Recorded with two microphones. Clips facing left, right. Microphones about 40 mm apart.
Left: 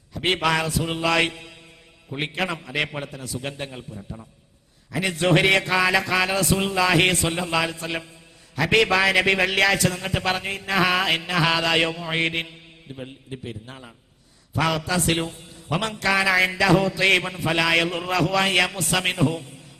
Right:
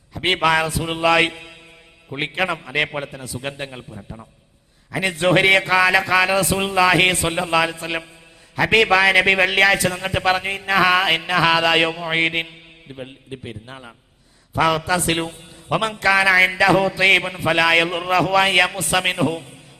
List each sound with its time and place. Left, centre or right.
0.1 s a man's voice: centre